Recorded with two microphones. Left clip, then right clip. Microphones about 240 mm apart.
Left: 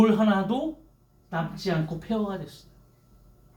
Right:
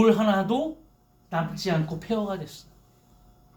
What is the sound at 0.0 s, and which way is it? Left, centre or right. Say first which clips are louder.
A man's voice: right 2 dB; right.